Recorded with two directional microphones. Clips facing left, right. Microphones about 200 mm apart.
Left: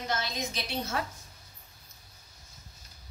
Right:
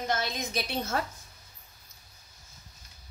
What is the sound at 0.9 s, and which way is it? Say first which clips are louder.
Speech: right 2 dB; 45° right (ahead or behind).